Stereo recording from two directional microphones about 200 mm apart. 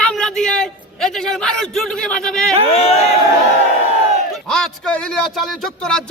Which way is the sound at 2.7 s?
30° left (ahead or behind).